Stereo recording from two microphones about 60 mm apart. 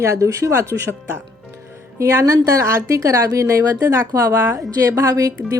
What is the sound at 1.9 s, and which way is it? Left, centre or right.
Speech, right.